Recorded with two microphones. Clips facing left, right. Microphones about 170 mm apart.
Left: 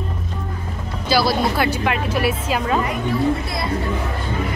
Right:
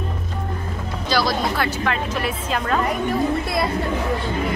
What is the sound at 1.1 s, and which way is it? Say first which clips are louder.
A woman's voice: left 3 dB; 10° left (ahead or behind).